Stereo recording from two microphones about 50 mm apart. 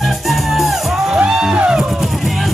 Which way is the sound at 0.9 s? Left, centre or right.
Centre.